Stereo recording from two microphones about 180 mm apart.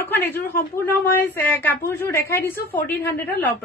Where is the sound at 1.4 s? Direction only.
10° left (ahead or behind).